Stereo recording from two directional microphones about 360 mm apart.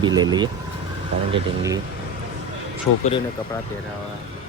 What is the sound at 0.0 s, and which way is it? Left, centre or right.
Speech, centre.